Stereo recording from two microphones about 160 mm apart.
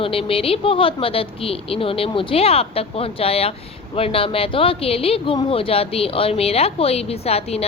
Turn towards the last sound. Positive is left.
turn(degrees=40)  # may be behind; listen again after turning